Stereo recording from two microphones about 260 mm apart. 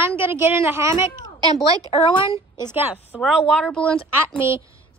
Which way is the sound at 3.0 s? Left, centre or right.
Centre.